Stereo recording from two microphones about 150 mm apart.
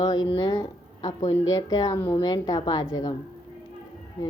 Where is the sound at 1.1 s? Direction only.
50° left (ahead or behind).